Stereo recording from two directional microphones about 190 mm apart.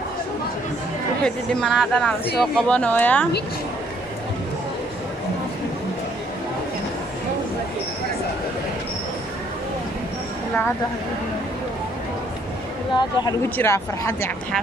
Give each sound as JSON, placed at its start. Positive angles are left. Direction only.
{"t": 1.2, "sound": "speech", "side_deg": 5}
{"t": 12.9, "sound": "speech", "side_deg": 20}